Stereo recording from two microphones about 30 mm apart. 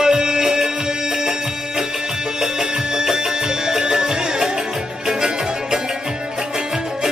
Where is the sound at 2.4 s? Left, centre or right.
Centre.